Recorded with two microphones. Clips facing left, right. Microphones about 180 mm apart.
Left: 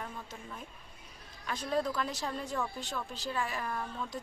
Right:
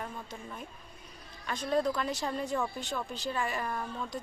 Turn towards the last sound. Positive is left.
turn(degrees=0)  # may be behind; listen again after turning